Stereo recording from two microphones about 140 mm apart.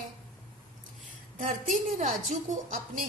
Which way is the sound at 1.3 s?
65° right (ahead or behind).